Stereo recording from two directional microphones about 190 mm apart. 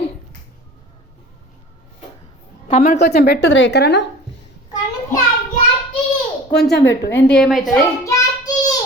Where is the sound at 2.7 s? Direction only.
40° left (ahead or behind).